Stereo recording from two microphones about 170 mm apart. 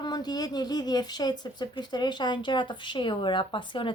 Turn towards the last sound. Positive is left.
turn(degrees=30)  # may be behind; listen again after turning